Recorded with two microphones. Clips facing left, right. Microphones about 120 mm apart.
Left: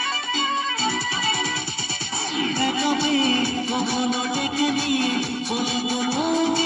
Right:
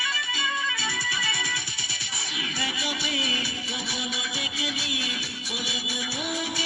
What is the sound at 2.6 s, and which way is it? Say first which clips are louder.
Music: left 10 dB; 45° left (ahead or behind).